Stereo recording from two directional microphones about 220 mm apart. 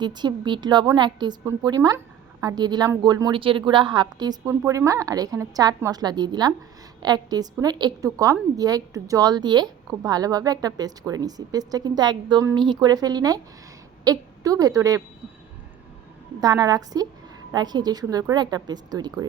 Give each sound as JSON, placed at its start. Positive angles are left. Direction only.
{"t": 0.0, "sound": "a woman's voice", "side_deg": -20}
{"t": 16.4, "sound": "a woman's voice", "side_deg": -15}